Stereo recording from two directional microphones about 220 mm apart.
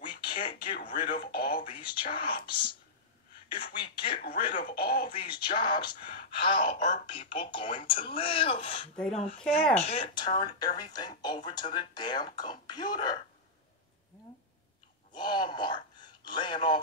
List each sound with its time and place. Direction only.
0.2 s a sound: 20° left (ahead or behind)
0.6 s speech: 40° left (ahead or behind)
1.3 s a sound: 45° left (ahead or behind)
1.6 s speech: 20° left (ahead or behind)
4.6 s speech: 45° left (ahead or behind)
5.0 s speech: 20° left (ahead or behind)
15.1 s speech: 20° left (ahead or behind)